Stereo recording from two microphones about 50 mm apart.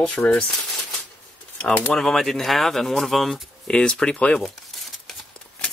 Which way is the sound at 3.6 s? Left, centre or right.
Centre.